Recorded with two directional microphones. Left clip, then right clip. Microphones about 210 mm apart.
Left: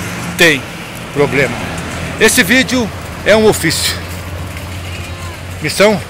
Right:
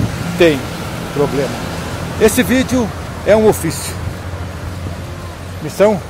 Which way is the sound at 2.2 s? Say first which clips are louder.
Left 3 dB; centre (ahead or behind).